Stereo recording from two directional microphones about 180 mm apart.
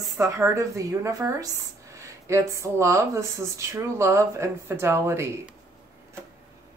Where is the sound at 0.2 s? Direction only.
15° right (ahead or behind).